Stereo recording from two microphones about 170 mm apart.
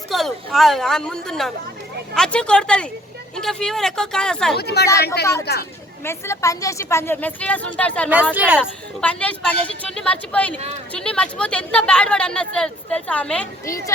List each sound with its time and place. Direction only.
0.1 s speech: centre (ahead or behind)
4.5 s speech: 75° left (ahead or behind)
6.1 s a woman's voice: 15° left (ahead or behind)
8.1 s speech: 10° right (ahead or behind)
9.0 s a woman's voice: 5° left (ahead or behind)
13.7 s a woman's voice: 20° left (ahead or behind)